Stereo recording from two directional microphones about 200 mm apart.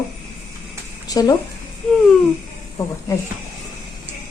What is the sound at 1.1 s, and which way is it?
Speech, 20° left (ahead or behind).